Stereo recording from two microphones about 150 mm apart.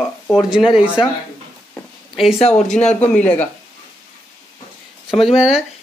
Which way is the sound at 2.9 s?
10° left (ahead or behind).